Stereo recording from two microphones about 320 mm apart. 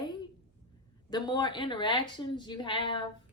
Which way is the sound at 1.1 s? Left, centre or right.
Centre.